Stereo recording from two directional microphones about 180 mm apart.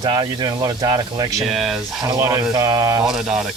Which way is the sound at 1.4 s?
Centre (ahead or behind).